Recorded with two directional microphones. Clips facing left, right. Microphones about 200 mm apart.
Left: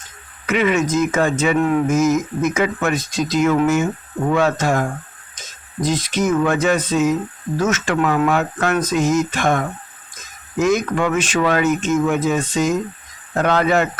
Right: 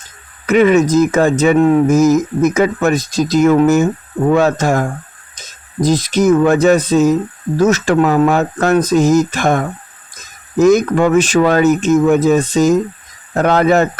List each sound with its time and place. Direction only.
0.4 s speech: 40° right (ahead or behind)